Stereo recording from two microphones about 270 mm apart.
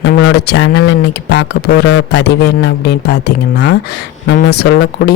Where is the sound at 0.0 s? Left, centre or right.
Left.